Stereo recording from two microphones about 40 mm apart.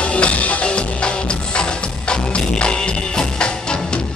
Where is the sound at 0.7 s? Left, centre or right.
Left.